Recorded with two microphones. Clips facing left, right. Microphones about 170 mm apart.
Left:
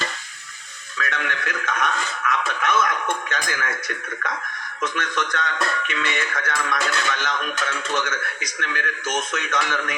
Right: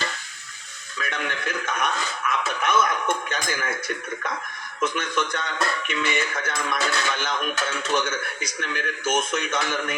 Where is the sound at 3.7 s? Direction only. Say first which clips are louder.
Right 1 dB; 25° right (ahead or behind).